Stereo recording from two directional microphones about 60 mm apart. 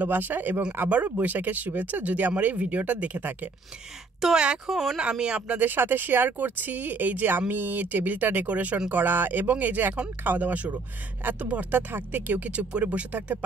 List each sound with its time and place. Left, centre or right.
0.0 s speech: right
4.2 s speech: centre
5.1 s speech: centre
5.6 s speech: right
9.0 s speech: right